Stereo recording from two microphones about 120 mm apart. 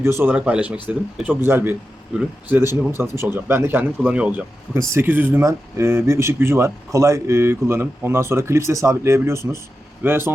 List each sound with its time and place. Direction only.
0.0 s speech: 20° right (ahead or behind)